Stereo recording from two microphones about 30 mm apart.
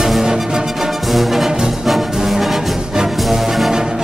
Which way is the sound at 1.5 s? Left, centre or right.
Centre.